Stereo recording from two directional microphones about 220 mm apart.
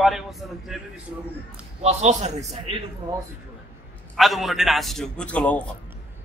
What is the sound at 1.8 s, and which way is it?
Speech, 30° right (ahead or behind).